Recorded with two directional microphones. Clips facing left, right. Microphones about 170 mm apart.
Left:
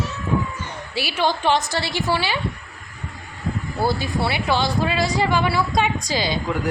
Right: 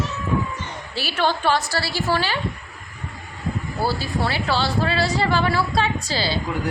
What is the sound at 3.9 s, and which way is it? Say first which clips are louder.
Speech: left 1 dB; 15° left (ahead or behind).